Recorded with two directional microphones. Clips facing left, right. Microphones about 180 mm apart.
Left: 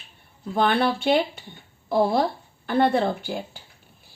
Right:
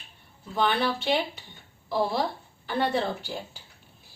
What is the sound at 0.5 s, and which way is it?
Speech, 50° left (ahead or behind).